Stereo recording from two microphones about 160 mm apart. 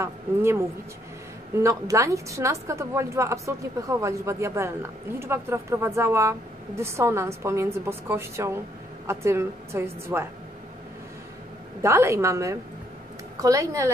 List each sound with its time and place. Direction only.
0.0 s a woman's voice: 15° right (ahead or behind)
11.8 s a woman's voice: 15° right (ahead or behind)